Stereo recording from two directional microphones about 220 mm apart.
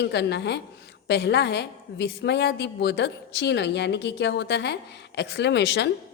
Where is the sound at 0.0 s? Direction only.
50° left (ahead or behind).